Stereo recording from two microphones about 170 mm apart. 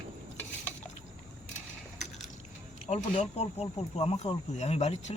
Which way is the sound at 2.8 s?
40° left (ahead or behind).